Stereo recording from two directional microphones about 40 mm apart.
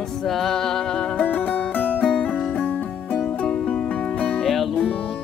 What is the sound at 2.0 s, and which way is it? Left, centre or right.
Music, centre.